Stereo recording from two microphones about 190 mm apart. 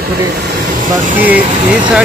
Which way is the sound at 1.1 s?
10° right (ahead or behind).